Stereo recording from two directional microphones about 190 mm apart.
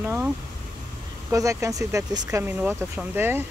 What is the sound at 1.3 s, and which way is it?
Speech, 15° right (ahead or behind).